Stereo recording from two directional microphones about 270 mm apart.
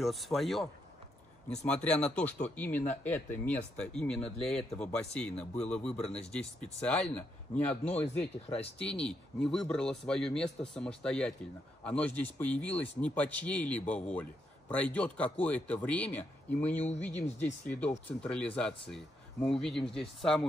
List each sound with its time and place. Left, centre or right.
0.0 s speech: centre
7.7 s speech: left
8.0 s speech: centre
8.5 s speech: left
8.7 s speech: centre